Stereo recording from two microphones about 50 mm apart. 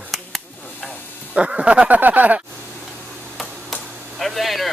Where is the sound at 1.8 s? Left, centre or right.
Right.